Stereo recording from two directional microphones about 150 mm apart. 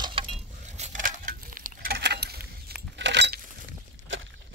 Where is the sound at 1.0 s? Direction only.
65° right (ahead or behind); by 2.7 s 90° right.